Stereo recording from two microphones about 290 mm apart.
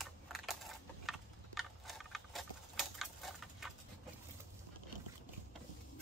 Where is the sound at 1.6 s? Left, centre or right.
Centre.